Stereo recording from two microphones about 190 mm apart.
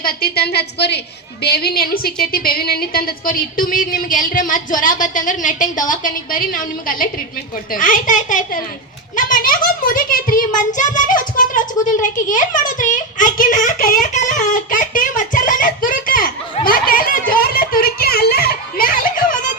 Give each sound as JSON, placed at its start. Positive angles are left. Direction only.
{"t": 0.0, "sound": "a woman's voice", "side_deg": 55}